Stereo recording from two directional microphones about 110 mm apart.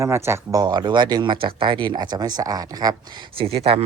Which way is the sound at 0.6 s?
40° right (ahead or behind).